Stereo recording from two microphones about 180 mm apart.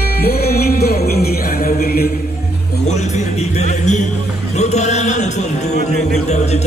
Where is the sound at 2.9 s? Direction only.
40° left (ahead or behind).